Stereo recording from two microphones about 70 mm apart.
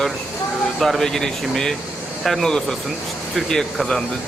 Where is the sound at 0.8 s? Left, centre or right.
Centre.